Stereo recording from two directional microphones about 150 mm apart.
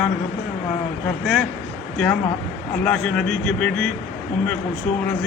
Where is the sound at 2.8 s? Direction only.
5° left (ahead or behind).